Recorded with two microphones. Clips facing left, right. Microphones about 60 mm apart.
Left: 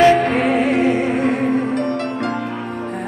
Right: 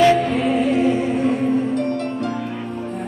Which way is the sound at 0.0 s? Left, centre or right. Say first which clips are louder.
Left 2 dB; left.